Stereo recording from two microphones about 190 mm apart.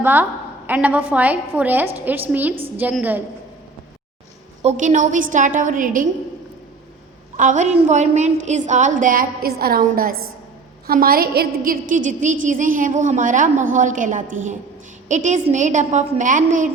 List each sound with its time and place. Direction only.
0.0 s a woman's voice: 10° right (ahead or behind)
4.6 s a woman's voice: 40° right (ahead or behind)
7.3 s a woman's voice: 40° right (ahead or behind)